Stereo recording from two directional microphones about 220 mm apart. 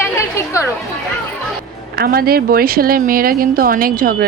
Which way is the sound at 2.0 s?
45° right (ahead or behind).